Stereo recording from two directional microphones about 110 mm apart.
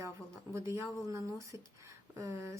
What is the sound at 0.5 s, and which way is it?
Speech, 25° right (ahead or behind).